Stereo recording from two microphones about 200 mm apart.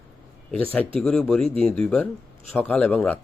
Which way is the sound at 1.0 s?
5° left (ahead or behind).